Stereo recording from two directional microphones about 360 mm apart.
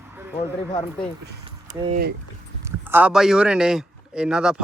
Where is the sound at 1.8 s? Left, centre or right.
Right.